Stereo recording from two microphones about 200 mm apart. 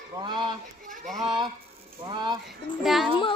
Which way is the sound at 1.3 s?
20° right (ahead or behind).